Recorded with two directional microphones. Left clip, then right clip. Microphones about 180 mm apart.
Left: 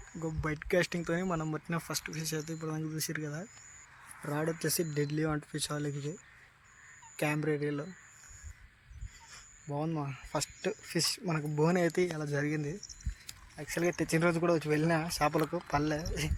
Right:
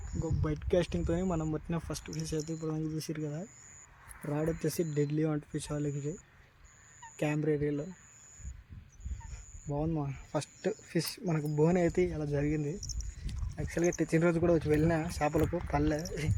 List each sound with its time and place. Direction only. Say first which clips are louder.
0.1 s a sound: right 1 dB; 20° left (ahead or behind)
0.4 s speech: left 1 dB; centre (ahead or behind)
4.6 s speech: right 1 dB; 5° left (ahead or behind)
5.9 s speech: right 2 dB; 35° left (ahead or behind)
7.4 s speech: right 2 dB; 10° left (ahead or behind)
9.7 s speech: right 1 dB; 5° left (ahead or behind)